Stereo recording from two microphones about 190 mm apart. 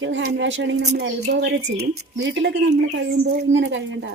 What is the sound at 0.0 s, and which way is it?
Speech, 75° right (ahead or behind).